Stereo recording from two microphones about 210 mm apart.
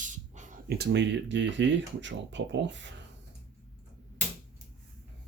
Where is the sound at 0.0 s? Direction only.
35° right (ahead or behind).